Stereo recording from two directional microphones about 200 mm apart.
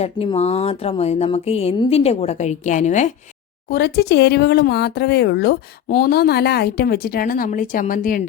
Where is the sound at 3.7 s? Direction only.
50° left (ahead or behind).